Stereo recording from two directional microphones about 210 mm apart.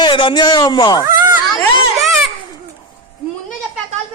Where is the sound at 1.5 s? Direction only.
Centre (ahead or behind).